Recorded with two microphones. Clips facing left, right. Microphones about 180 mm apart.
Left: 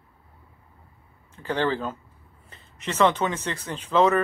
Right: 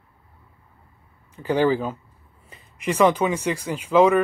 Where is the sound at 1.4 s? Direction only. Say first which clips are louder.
Right 5 dB; 10° right (ahead or behind).